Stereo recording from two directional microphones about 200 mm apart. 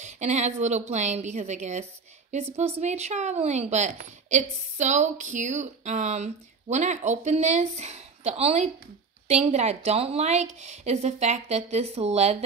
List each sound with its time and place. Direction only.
0.0 s speech: 35° right (ahead or behind)